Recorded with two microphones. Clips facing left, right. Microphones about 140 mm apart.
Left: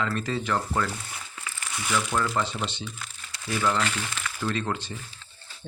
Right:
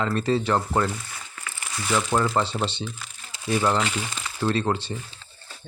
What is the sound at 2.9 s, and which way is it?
Speech, centre (ahead or behind).